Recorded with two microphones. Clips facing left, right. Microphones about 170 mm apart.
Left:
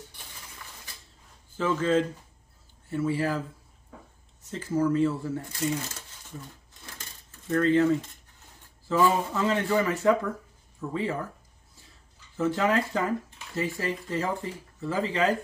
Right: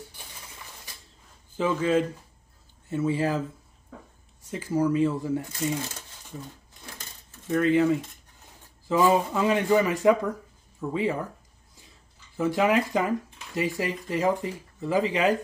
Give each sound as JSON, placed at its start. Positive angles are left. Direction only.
{"t": 1.6, "sound": "speech", "side_deg": -15}
{"t": 4.5, "sound": "speech", "side_deg": -10}
{"t": 7.4, "sound": "speech", "side_deg": -10}
{"t": 12.4, "sound": "speech", "side_deg": -10}